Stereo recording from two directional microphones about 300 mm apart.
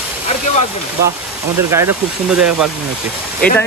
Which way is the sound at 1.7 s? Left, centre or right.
Centre.